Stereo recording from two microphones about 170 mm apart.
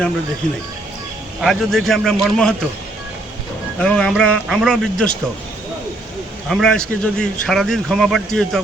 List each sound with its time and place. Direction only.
1.4 s a man's voice: centre (ahead or behind)
3.8 s a man's voice: 5° left (ahead or behind)
6.5 s a man's voice: centre (ahead or behind)